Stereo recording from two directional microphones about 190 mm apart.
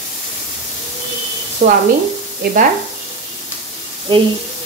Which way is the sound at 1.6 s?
50° right (ahead or behind).